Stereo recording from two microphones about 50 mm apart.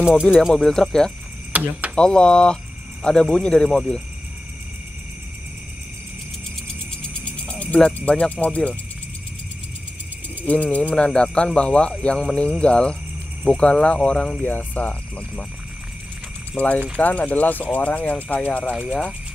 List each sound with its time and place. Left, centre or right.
0.5 s speech: centre
1.5 s speech: right
2.0 s speech: centre
7.0 s cricket: left
10.4 s speech: left
14.4 s speech: left
16.5 s speech: left
18.9 s speech: centre